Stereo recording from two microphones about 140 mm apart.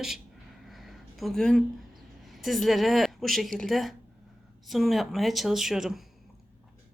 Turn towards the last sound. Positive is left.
turn(degrees=-5)  # may be behind; listen again after turning